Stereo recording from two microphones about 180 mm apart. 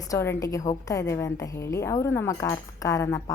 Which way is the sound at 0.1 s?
15° left (ahead or behind).